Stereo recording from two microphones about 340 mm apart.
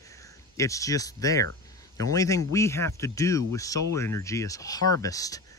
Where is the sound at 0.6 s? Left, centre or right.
Centre.